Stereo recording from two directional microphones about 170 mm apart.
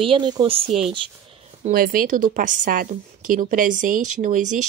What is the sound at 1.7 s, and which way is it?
A woman's voice, 60° right (ahead or behind).